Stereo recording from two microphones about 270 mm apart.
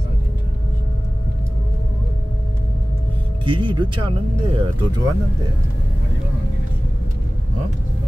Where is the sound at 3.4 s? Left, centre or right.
Centre.